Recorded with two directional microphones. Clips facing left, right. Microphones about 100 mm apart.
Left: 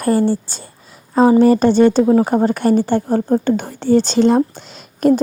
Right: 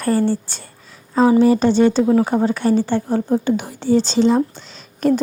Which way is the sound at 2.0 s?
40° left (ahead or behind).